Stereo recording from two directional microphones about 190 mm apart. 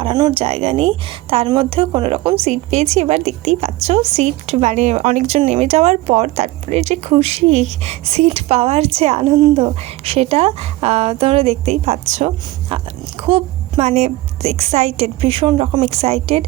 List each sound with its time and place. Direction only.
0.0 s a woman's voice: 25° right (ahead or behind)